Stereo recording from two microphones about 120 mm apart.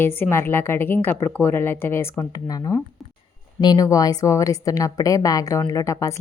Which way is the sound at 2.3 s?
30° left (ahead or behind).